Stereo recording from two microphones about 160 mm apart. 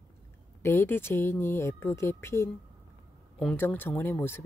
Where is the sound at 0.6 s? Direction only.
15° left (ahead or behind).